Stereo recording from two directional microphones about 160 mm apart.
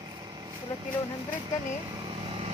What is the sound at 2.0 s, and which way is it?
Vehicle, 35° right (ahead or behind).